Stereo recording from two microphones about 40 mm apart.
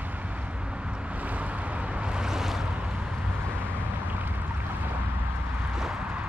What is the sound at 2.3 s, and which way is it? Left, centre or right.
Waves, centre.